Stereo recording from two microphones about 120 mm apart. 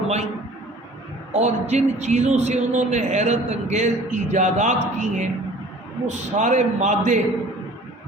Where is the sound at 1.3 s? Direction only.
70° right (ahead or behind); by 7.2 s 85° right.